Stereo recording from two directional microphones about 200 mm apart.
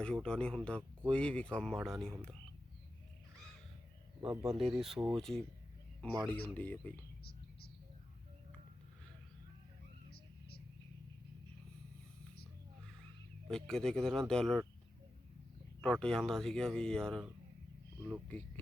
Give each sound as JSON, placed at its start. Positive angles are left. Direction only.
{"t": 0.0, "sound": "speech", "side_deg": 5}
{"t": 4.2, "sound": "speech", "side_deg": -25}
{"t": 4.6, "sound": "speech", "side_deg": 0}
{"t": 13.5, "sound": "speech", "side_deg": 5}
{"t": 15.8, "sound": "speech", "side_deg": 5}
{"t": 18.3, "sound": "speech", "side_deg": 10}